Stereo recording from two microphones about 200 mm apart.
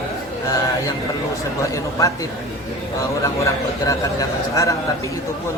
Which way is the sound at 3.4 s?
15° left (ahead or behind).